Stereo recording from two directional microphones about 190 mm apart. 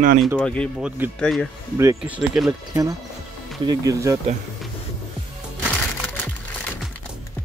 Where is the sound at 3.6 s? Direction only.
20° right (ahead or behind).